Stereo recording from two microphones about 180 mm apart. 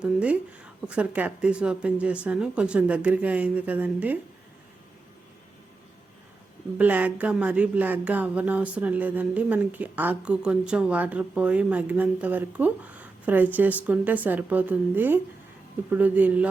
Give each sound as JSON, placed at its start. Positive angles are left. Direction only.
{"t": 0.0, "sound": "speech", "side_deg": -5}
{"t": 6.7, "sound": "speech", "side_deg": -10}